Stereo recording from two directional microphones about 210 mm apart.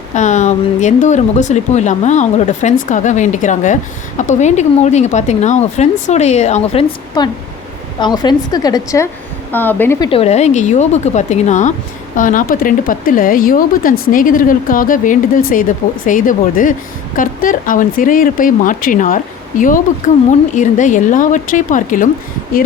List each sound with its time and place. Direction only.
0.1 s a woman's voice: 35° left (ahead or behind); by 10.1 s 10° left (ahead or behind)
10.1 s speech: 30° left (ahead or behind)